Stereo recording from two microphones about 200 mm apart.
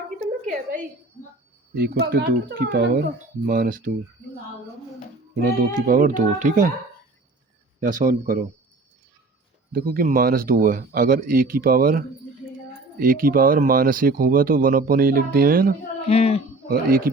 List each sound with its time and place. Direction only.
0.2 s a sound: 40° right (ahead or behind)
1.7 s speech: 50° right (ahead or behind)
5.5 s speech: 45° right (ahead or behind)
7.8 s speech: 40° right (ahead or behind)
9.7 s speech: 45° right (ahead or behind)
16.0 s speech: 30° left (ahead or behind)
16.6 s speech: 50° right (ahead or behind)